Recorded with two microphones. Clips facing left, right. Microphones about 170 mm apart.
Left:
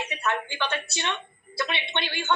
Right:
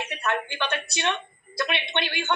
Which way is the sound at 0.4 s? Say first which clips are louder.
Right 1 dB; 55° right (ahead or behind).